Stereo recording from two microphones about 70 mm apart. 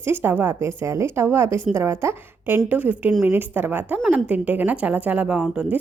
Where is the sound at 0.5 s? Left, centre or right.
Right.